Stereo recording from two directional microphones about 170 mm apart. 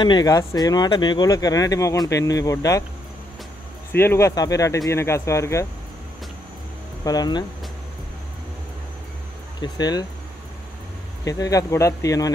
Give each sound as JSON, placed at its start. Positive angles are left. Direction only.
{"t": 0.0, "sound": "speech", "side_deg": 25}
{"t": 3.9, "sound": "speech", "side_deg": 15}
{"t": 7.1, "sound": "speech", "side_deg": 25}
{"t": 9.6, "sound": "speech", "side_deg": 25}
{"t": 11.2, "sound": "speech", "side_deg": 20}